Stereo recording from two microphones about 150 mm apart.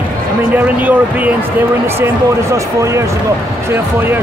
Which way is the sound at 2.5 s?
20° right (ahead or behind).